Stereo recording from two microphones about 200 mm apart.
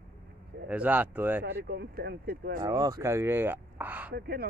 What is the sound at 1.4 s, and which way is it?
Speech, 55° right (ahead or behind).